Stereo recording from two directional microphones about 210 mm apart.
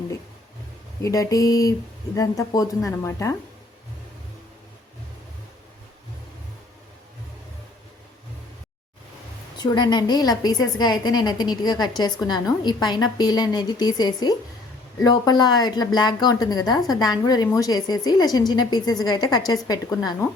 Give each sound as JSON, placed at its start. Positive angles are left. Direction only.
{"t": 1.0, "sound": "a woman's voice", "side_deg": 15}
{"t": 9.6, "sound": "a woman's voice", "side_deg": 20}